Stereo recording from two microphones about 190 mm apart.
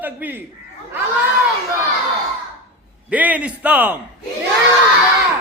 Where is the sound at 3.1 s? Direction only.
10° right (ahead or behind).